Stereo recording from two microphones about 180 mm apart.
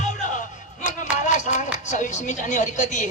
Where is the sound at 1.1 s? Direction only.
40° left (ahead or behind).